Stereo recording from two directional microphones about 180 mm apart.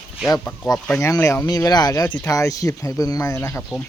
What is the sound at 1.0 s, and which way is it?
Speech, 15° left (ahead or behind).